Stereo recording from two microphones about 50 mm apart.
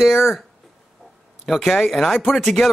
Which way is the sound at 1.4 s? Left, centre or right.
Centre.